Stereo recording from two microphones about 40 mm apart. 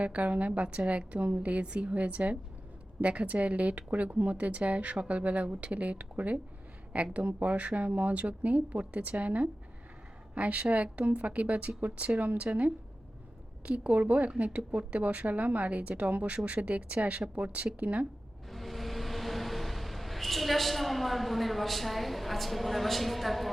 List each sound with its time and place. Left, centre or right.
0.0 s speech: right
18.4 s vehicle: centre